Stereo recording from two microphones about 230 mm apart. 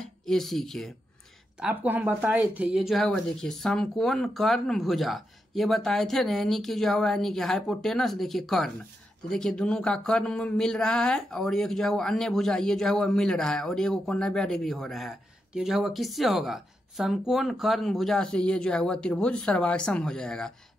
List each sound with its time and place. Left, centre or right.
0.0 s speech: centre